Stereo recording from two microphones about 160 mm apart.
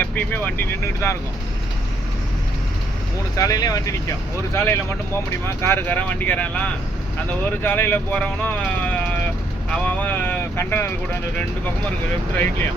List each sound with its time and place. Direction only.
0.0 s speech: 10° left (ahead or behind)
3.3 s speech: 20° left (ahead or behind)